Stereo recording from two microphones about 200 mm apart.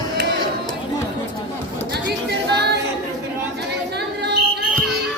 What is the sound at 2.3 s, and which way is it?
A capella, 55° right (ahead or behind).